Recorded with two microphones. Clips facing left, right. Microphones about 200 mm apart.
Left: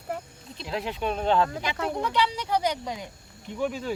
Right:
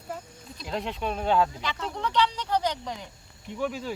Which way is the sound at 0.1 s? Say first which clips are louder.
Left 4 dB; 60° left (ahead or behind).